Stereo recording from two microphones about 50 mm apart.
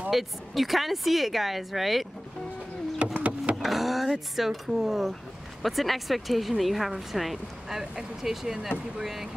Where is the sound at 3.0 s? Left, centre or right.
Right.